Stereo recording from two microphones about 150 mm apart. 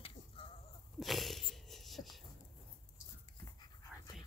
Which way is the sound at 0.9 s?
Centre (ahead or behind).